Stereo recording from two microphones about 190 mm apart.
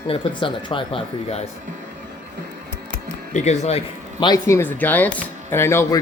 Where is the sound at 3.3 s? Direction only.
35° left (ahead or behind).